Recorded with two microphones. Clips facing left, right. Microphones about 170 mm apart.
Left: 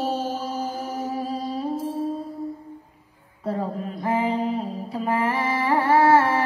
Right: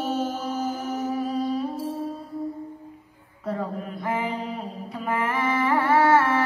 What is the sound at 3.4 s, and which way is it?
Mantra, 30° left (ahead or behind).